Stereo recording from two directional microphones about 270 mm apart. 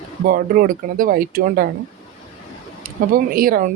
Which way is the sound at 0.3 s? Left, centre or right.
Right.